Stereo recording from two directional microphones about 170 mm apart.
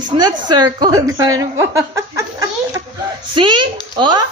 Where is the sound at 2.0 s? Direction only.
20° right (ahead or behind).